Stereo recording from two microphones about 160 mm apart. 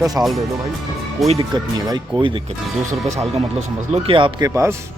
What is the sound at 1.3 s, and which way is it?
Speech, 30° right (ahead or behind).